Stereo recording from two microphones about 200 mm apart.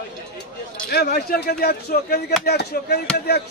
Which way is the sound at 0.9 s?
50° left (ahead or behind).